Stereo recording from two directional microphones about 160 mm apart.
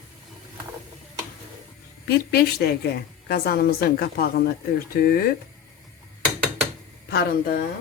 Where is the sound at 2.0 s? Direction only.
80° left.